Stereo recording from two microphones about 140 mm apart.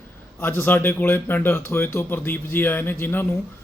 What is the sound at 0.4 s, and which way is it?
A man's voice, 15° left (ahead or behind).